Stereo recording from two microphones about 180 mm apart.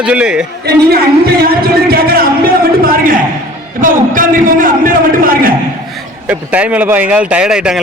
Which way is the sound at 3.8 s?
50° right (ahead or behind).